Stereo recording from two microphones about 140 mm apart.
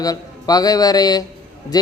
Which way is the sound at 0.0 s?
25° left (ahead or behind).